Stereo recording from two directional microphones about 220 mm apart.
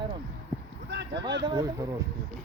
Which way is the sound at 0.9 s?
50° right (ahead or behind).